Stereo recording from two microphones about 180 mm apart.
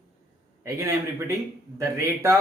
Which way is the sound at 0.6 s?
15° right (ahead or behind).